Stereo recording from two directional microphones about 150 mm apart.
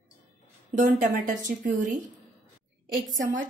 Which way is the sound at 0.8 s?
60° right (ahead or behind).